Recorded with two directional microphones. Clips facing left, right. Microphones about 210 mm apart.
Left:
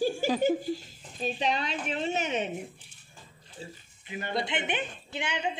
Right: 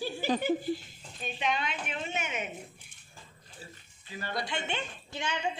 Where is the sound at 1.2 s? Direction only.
35° left (ahead or behind).